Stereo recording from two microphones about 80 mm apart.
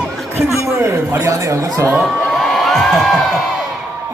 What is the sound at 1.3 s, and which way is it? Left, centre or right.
Speech, right.